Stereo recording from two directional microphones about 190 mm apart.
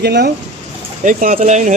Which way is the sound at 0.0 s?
60° right (ahead or behind).